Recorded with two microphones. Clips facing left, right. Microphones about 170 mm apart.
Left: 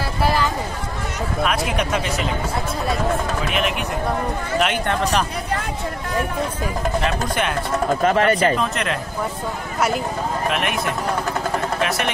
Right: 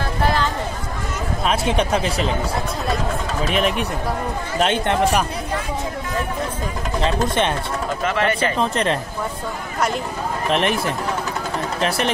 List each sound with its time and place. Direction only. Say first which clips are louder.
0.2 s a sound: left 1 dB; 10° left (ahead or behind)
1.4 s speech: right 2 dB; 30° right (ahead or behind)
3.4 s a man's voice: right 3 dB; 35° right (ahead or behind)
7.0 s speech: right 6 dB; 25° right (ahead or behind)
8.0 s speech: left 3 dB; 40° left (ahead or behind)
8.5 s a man's voice: right 3 dB; 30° right (ahead or behind)
10.5 s a man's voice: right 3 dB; 30° right (ahead or behind)